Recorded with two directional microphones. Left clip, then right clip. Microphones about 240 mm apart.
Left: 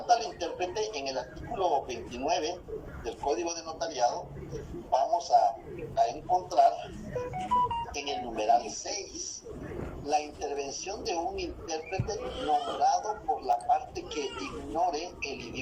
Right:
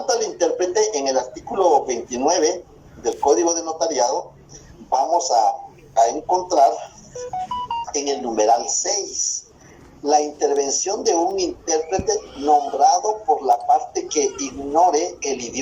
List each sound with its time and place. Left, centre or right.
0.0 s a woman's voice: right